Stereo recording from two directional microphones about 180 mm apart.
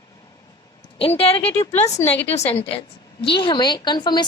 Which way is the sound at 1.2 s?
35° left (ahead or behind).